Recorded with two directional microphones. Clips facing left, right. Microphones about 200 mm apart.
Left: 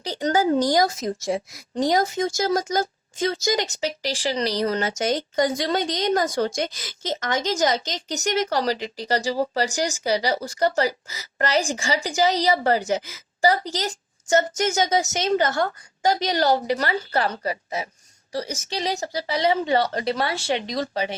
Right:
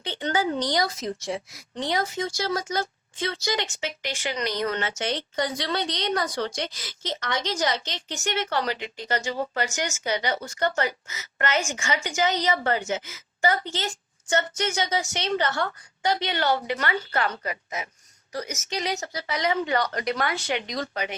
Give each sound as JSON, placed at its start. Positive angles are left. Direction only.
{"t": 0.0, "sound": "a woman's voice", "side_deg": 40}